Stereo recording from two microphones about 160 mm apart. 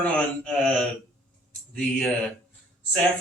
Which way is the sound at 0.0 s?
5° left (ahead or behind).